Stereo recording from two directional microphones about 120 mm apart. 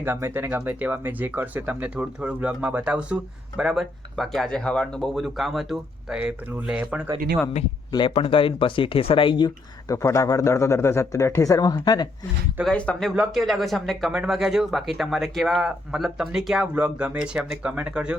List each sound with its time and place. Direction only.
0.0 s speech: 15° right (ahead or behind)
8.1 s speech: 50° left (ahead or behind)
9.9 s speech: 25° left (ahead or behind)
12.6 s speech: 10° left (ahead or behind); by 18.2 s 10° right (ahead or behind)